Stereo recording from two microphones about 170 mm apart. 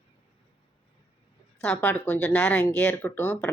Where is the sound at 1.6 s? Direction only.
5° left (ahead or behind).